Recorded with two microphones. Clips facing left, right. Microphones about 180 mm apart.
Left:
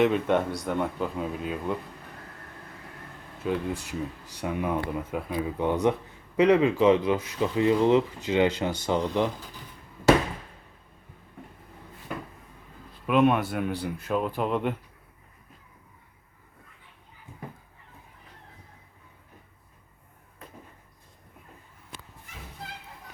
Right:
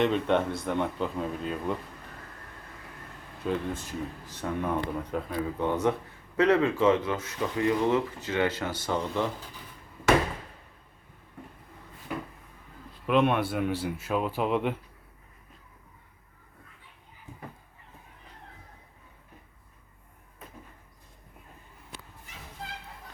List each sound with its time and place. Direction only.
0.0 s speech: 5° left (ahead or behind)
3.4 s speech: 5° left (ahead or behind)
13.1 s speech: centre (ahead or behind)